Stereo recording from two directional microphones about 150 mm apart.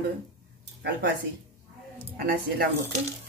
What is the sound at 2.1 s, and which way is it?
Speech, 75° right (ahead or behind).